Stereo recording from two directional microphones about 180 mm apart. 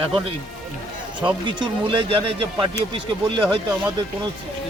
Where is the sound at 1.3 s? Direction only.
25° right (ahead or behind).